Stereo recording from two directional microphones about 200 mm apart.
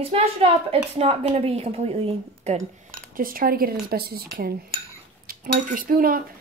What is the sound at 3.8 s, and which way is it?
Cutlery, 50° right (ahead or behind).